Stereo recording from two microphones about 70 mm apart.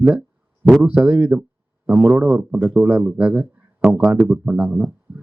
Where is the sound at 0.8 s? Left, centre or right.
Right.